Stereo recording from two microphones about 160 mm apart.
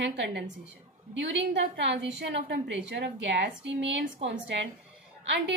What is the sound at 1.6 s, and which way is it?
A woman's voice, 90° right.